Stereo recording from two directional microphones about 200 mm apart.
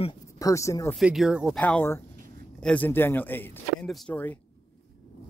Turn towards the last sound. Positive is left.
turn(degrees=10)  # may be behind; listen again after turning